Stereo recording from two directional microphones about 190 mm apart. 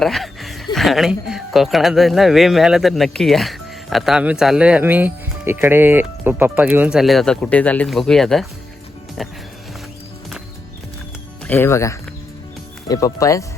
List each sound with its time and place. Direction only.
0.0 s speech: centre (ahead or behind)
11.4 s speech: 10° left (ahead or behind)